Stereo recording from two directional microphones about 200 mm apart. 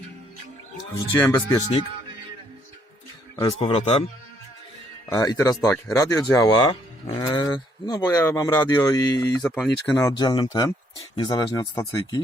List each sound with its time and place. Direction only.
1.1 s speech: 15° left (ahead or behind)
3.6 s speech: 30° left (ahead or behind)
5.0 s speech: 20° left (ahead or behind)